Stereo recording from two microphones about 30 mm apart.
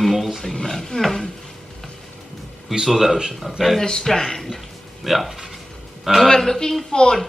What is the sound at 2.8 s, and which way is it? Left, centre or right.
Speech, centre.